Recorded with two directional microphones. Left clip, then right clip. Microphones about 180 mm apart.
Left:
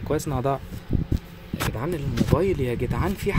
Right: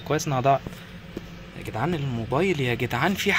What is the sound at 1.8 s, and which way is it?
Speech, centre (ahead or behind).